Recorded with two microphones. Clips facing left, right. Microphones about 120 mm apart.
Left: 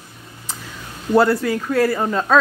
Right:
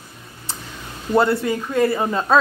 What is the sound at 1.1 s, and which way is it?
Speech, centre (ahead or behind).